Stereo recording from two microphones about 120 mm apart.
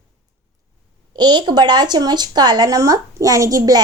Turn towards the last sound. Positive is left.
turn(degrees=-30)  # may be behind; listen again after turning